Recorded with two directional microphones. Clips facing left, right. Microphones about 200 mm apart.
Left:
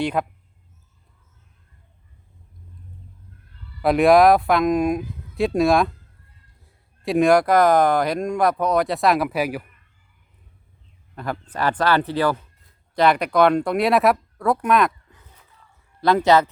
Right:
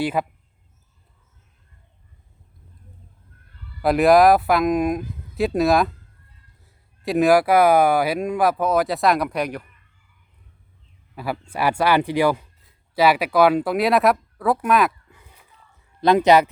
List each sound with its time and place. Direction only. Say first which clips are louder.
0.0 s speech: even; 5° right (ahead or behind)
3.8 s speech: even; centre (ahead or behind)
11.1 s speech: right 1 dB; 5° right (ahead or behind)
16.0 s speech: right 2 dB; 20° right (ahead or behind)